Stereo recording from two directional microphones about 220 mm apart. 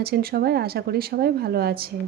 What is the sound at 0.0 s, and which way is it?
A woman's voice, 45° right (ahead or behind).